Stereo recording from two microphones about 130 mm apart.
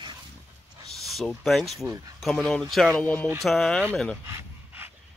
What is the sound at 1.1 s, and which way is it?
Speech, centre (ahead or behind).